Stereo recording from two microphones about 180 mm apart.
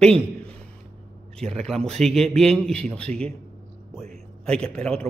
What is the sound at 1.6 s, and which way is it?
A man's voice, 5° left (ahead or behind).